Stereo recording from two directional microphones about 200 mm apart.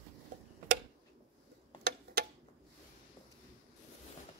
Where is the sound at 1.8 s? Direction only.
55° right (ahead or behind).